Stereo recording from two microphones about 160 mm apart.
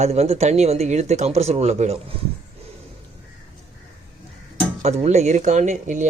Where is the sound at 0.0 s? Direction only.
40° right (ahead or behind).